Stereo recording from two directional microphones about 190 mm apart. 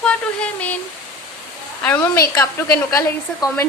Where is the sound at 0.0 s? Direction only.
5° left (ahead or behind).